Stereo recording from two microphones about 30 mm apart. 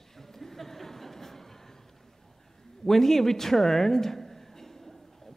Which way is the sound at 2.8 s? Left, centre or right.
Centre.